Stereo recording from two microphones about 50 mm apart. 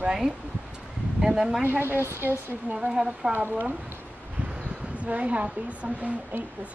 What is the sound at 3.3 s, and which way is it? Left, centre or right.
Speech, right.